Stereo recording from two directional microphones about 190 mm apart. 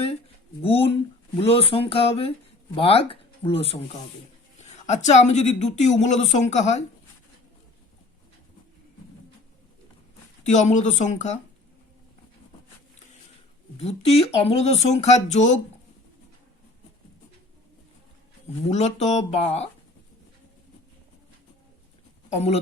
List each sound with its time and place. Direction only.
0.6 s a woman's voice: 30° left (ahead or behind)
10.4 s a woman's voice: 40° left (ahead or behind)
13.7 s a woman's voice: 35° left (ahead or behind)
18.7 s a woman's voice: 35° left (ahead or behind)
22.3 s speech: 35° left (ahead or behind)